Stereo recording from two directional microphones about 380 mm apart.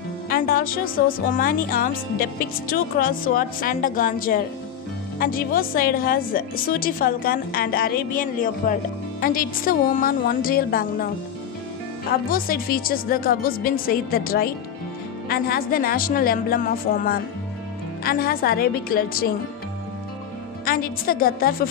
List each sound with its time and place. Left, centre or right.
0.3 s a woman's voice: left
12.3 s a woman's voice: left
20.6 s a woman's voice: left